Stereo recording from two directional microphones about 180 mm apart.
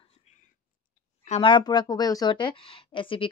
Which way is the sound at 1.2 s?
30° left (ahead or behind).